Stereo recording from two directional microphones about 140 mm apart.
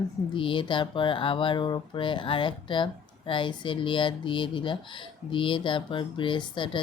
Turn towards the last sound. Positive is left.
turn(degrees=35)  # may be behind; listen again after turning